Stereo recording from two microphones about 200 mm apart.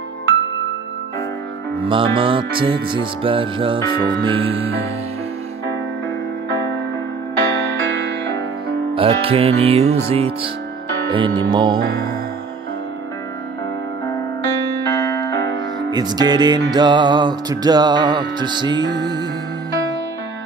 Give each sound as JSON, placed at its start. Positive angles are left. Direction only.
{"t": 1.8, "sound": "music", "side_deg": -25}
{"t": 7.3, "sound": "music", "side_deg": -60}
{"t": 8.9, "sound": "music", "side_deg": -30}
{"t": 11.1, "sound": "music", "side_deg": -25}
{"t": 14.9, "sound": "keyboard", "side_deg": 15}
{"t": 15.9, "sound": "music", "side_deg": -20}